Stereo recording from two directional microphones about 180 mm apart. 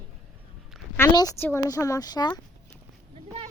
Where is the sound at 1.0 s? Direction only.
15° left (ahead or behind).